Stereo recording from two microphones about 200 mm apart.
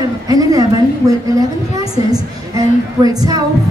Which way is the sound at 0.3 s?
20° right (ahead or behind).